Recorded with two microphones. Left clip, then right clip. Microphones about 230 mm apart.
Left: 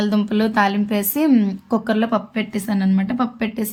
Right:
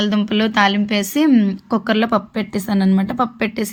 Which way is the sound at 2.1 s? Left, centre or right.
Right.